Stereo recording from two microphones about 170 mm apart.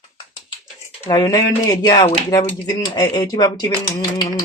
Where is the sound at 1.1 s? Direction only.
20° left (ahead or behind).